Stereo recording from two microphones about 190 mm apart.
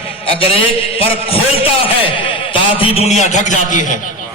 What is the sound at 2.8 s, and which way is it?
A man's voice, 30° left (ahead or behind).